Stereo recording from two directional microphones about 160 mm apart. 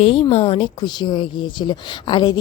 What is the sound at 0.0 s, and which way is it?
A woman's voice, 35° left (ahead or behind).